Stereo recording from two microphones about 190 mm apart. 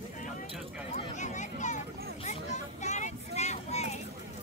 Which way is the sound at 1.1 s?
40° left (ahead or behind).